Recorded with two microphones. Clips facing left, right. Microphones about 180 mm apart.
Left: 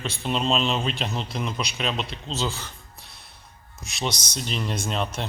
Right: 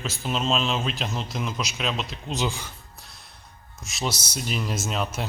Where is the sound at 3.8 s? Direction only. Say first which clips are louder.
Even; centre (ahead or behind).